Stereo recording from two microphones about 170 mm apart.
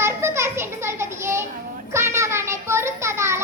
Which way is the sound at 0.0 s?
15° right (ahead or behind).